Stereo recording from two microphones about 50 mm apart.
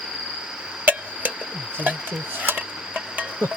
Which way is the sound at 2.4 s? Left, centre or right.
Right.